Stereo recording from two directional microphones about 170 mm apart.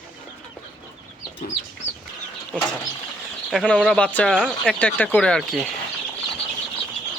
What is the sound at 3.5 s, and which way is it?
Speech, centre (ahead or behind).